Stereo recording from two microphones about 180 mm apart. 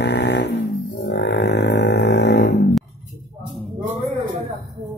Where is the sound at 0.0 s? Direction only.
75° left (ahead or behind).